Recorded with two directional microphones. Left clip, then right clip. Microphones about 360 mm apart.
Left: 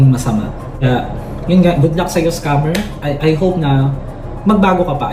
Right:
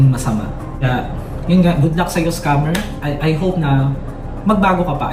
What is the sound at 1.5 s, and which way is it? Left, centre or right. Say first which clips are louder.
Speech: left 4 dB; centre.